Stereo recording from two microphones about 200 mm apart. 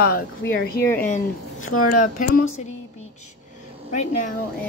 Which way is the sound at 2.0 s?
40° left (ahead or behind).